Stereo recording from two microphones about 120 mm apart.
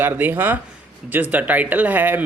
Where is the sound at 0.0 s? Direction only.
15° right (ahead or behind).